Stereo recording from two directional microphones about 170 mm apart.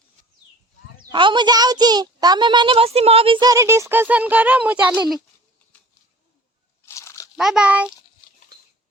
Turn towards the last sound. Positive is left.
turn(degrees=-5)  # may be behind; listen again after turning